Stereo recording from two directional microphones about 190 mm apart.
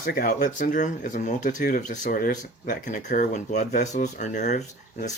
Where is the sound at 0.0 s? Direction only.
45° left (ahead or behind).